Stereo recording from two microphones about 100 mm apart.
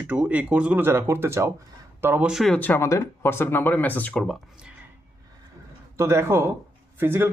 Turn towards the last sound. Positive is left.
turn(degrees=-25)  # may be behind; listen again after turning